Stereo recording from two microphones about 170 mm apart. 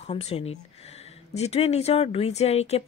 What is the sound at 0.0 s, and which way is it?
Speech, 35° left (ahead or behind).